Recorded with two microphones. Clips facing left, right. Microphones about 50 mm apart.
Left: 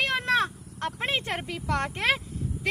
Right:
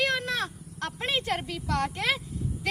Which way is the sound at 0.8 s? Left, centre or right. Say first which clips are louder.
Even; left.